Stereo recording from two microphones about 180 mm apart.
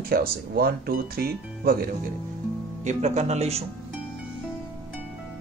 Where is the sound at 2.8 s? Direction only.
40° right (ahead or behind).